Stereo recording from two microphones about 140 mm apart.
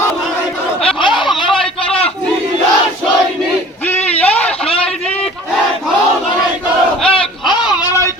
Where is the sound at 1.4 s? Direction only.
5° left (ahead or behind).